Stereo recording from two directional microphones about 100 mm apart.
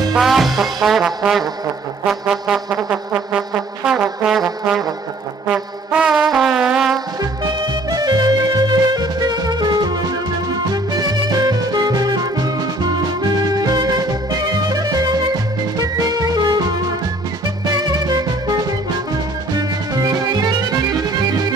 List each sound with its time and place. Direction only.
0.1 s music: centre (ahead or behind)
2.0 s brass instrument: 5° right (ahead or behind)
7.2 s music: 40° right (ahead or behind)
17.6 s music: 40° right (ahead or behind)